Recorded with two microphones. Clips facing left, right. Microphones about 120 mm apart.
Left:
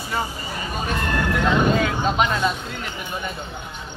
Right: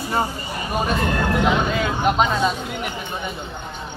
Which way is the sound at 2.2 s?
Centre (ahead or behind).